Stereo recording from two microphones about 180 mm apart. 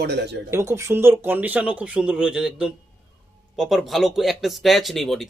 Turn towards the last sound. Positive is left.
turn(degrees=0)  # may be behind; listen again after turning